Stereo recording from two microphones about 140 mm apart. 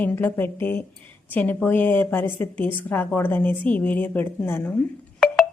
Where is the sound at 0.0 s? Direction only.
15° left (ahead or behind).